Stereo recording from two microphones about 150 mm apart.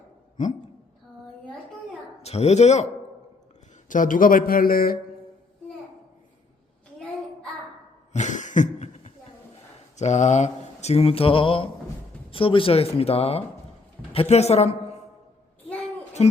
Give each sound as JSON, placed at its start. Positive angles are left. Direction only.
{"t": 2.2, "sound": "speech", "side_deg": 45}
{"t": 3.8, "sound": "speech", "side_deg": 60}
{"t": 8.1, "sound": "cough", "side_deg": 55}
{"t": 10.0, "sound": "speech", "side_deg": 50}
{"t": 16.2, "sound": "speech", "side_deg": 45}